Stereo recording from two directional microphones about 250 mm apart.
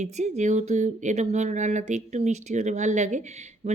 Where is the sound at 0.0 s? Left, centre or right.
Right.